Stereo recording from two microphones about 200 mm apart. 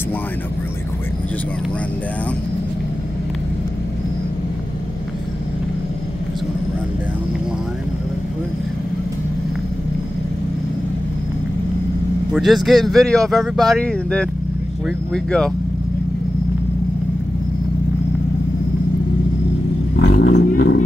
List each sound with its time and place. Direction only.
12.3 s speech: centre (ahead or behind)
20.0 s vehicle: 60° left (ahead or behind)